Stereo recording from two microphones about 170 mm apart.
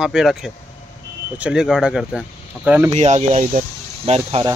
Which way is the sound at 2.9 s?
40° right (ahead or behind).